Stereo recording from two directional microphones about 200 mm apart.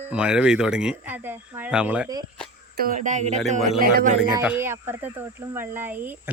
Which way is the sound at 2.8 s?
40° right (ahead or behind).